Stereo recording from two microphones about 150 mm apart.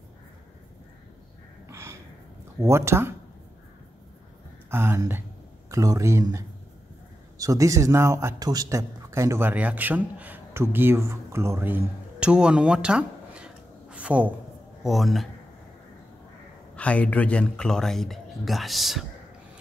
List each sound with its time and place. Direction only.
1.7 s gasp: 15° right (ahead or behind)
2.6 s speech: 20° right (ahead or behind)
4.6 s speech: 15° right (ahead or behind); by 15.2 s centre (ahead or behind)
16.7 s speech: 10° left (ahead or behind)